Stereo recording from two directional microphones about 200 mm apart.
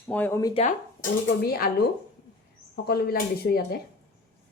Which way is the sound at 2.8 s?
50° left (ahead or behind).